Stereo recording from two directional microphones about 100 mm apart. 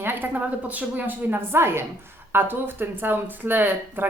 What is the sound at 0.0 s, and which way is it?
Speech, 20° right (ahead or behind).